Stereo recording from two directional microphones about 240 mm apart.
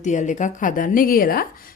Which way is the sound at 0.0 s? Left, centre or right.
Left.